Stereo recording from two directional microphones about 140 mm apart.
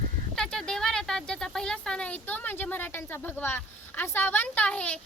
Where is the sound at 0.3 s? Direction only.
5° left (ahead or behind).